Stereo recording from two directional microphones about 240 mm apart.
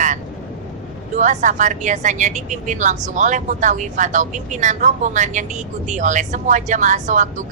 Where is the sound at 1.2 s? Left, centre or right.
Right.